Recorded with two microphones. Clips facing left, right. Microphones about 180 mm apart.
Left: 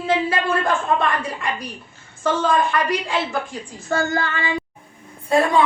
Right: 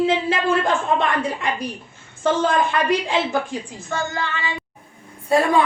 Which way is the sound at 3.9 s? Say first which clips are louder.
Left 5 dB; 45° left (ahead or behind).